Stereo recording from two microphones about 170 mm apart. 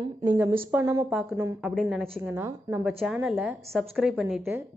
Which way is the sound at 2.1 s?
15° right (ahead or behind).